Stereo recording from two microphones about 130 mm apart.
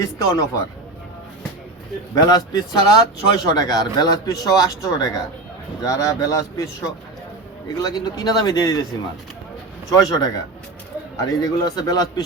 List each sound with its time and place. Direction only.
0.0 s speech: 25° left (ahead or behind)
2.1 s speech: 30° left (ahead or behind)
7.8 s speech: 30° left (ahead or behind)
9.9 s speech: 30° left (ahead or behind)